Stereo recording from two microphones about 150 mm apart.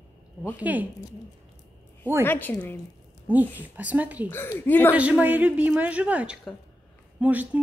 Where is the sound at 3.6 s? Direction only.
10° right (ahead or behind).